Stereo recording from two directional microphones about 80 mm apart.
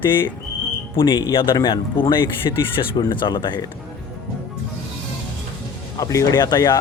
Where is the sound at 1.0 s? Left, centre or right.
Left.